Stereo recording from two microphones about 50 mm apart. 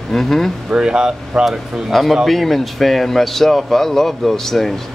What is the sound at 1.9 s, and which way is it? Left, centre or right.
Speech, centre.